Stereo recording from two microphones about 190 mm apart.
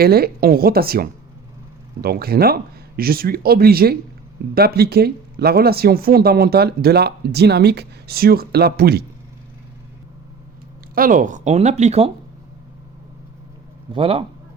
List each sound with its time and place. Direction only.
0.0 s speech: 55° right (ahead or behind)
10.9 s speech: 45° right (ahead or behind)
13.9 s a man's voice: 30° right (ahead or behind)